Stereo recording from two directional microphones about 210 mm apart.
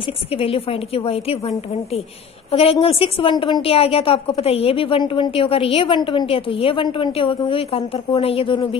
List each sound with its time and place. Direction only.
0.0 s a woman's voice: 25° left (ahead or behind)